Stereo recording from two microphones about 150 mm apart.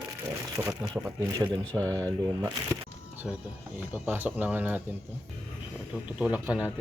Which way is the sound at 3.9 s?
15° right (ahead or behind).